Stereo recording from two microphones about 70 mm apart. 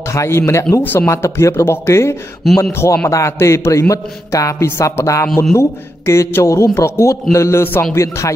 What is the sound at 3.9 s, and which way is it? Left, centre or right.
Speech, left.